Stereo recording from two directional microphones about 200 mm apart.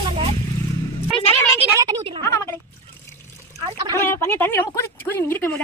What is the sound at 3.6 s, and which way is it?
Speech, 25° right (ahead or behind).